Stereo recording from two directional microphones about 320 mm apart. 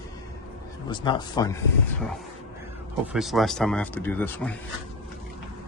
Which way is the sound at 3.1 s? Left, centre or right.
Centre.